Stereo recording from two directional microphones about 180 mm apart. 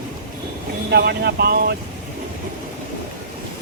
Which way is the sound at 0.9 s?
65° right (ahead or behind).